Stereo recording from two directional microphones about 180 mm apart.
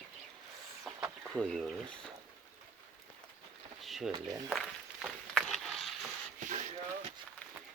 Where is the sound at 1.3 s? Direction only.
Centre (ahead or behind).